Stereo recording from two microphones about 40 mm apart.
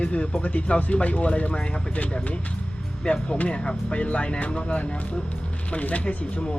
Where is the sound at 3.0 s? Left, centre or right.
Left.